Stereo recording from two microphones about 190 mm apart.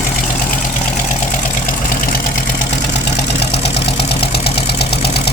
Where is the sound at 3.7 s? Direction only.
60° left (ahead or behind).